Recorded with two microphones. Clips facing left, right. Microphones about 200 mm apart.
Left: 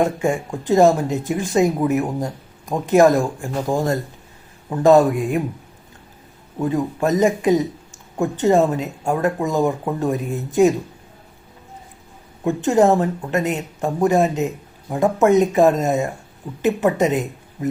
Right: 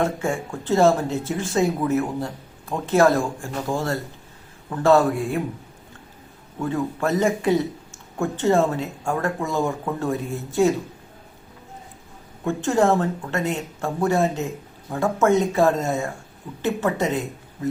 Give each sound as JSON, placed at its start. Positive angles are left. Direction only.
{"t": 0.0, "sound": "speech", "side_deg": 15}
{"t": 6.6, "sound": "speech", "side_deg": 20}
{"t": 12.5, "sound": "speech", "side_deg": 20}